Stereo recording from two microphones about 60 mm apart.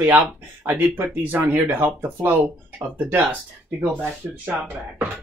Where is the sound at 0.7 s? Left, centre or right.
Right.